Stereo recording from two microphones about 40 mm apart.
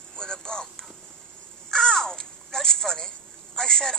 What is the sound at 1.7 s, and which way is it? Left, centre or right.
Caw, centre.